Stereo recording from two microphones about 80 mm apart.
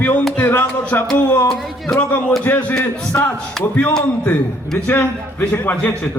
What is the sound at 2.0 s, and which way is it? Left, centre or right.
A man's voice, left.